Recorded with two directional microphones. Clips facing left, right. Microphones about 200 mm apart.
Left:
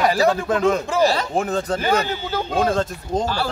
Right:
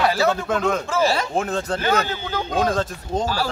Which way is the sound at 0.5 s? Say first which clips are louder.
Left 3 dB; centre (ahead or behind).